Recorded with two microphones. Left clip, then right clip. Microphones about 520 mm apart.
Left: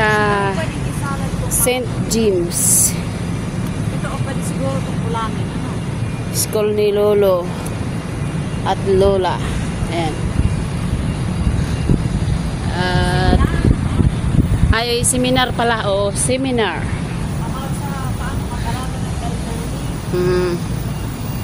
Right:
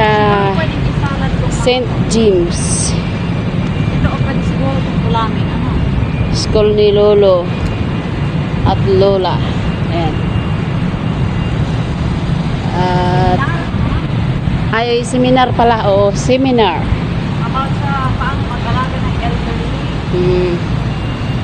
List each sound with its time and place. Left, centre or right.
0.0 s vehicle: left
1.7 s a sound: left
6.5 s speech: left
8.6 s speech: left
12.8 s vehicle: left
14.7 s speech: left